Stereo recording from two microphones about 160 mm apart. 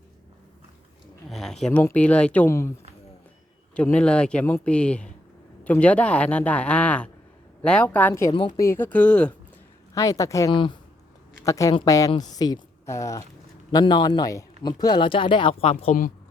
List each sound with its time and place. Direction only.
1.3 s a sound: centre (ahead or behind)
1.8 s speech: 10° left (ahead or behind)
3.8 s speech: 5° left (ahead or behind)
8.3 s speech: 30° left (ahead or behind); by 9.3 s 5° left (ahead or behind)
9.9 s a woman's voice: 20° left (ahead or behind)
10.5 s speech: 30° left (ahead or behind)
11.4 s a woman's voice: 20° left (ahead or behind)
13.7 s speech: 30° left (ahead or behind); by 16.1 s 55° left (ahead or behind)